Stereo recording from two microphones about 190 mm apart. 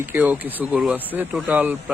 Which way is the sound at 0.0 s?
10° right (ahead or behind).